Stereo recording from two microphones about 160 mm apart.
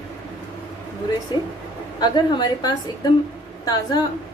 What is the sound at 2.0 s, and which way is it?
A woman's voice, 25° left (ahead or behind).